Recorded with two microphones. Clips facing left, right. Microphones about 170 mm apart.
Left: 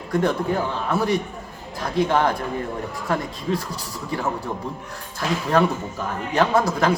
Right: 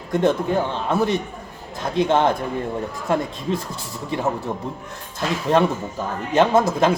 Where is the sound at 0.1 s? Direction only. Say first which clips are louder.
Right 2 dB; 25° right (ahead or behind).